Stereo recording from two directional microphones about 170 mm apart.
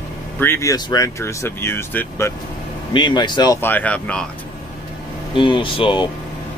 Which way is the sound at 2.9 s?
25° left (ahead or behind).